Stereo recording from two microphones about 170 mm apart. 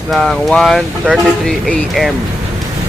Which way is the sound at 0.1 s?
Centre (ahead or behind).